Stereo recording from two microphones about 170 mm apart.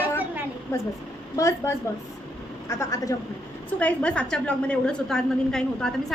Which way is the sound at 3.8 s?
5° left (ahead or behind).